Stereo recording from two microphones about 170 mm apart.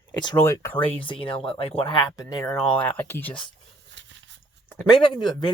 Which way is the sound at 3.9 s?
90° right.